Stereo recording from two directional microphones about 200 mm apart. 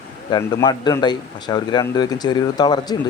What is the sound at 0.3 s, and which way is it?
Speech, 20° left (ahead or behind).